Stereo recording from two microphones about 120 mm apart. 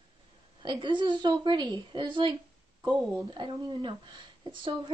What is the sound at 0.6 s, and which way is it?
Speech, 40° right (ahead or behind).